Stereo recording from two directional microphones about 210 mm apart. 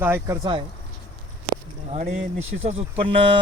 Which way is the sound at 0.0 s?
10° right (ahead or behind).